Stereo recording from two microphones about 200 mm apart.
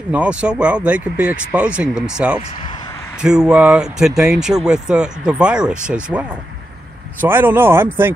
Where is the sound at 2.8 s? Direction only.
15° left (ahead or behind).